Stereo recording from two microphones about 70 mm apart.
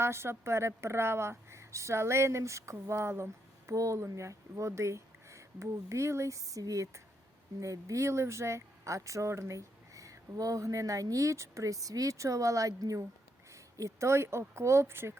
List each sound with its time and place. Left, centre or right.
0.0 s a woman's voice: right